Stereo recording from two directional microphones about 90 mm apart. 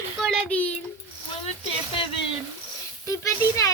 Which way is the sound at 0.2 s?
5° left (ahead or behind).